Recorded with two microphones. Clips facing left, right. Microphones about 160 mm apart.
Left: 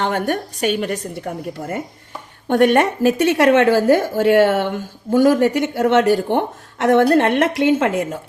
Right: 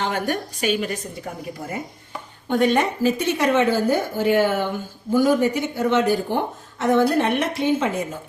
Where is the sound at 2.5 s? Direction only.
70° left (ahead or behind); by 4.0 s 90° left.